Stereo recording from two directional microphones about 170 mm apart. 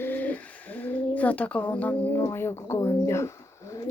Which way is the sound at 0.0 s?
10° left (ahead or behind).